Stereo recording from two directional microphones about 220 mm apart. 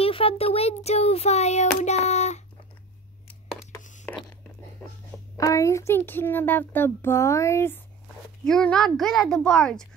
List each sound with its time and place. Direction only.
0.0 s child singing: 25° left (ahead or behind)
5.4 s a child's voice: 15° left (ahead or behind)